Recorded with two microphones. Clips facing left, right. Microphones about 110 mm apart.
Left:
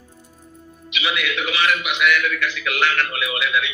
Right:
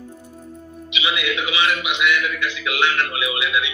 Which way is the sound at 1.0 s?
15° right (ahead or behind).